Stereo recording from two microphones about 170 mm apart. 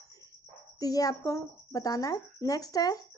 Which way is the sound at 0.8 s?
20° left (ahead or behind).